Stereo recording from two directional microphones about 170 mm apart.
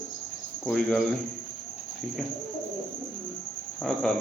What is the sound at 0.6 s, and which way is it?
Speech, centre (ahead or behind).